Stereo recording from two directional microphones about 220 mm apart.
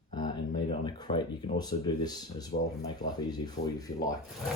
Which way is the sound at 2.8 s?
15° left (ahead or behind).